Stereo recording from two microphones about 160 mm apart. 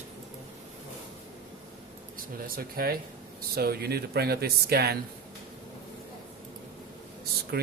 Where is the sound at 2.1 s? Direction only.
65° right (ahead or behind); by 4.9 s 85° right.